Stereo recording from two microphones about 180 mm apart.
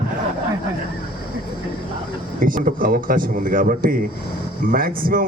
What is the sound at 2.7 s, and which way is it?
A man's voice, 50° right (ahead or behind).